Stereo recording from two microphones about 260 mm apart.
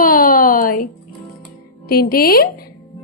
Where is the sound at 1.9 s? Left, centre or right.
Left.